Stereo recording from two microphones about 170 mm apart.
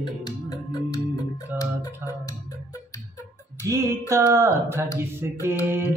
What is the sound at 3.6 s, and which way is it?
Music, 20° right (ahead or behind).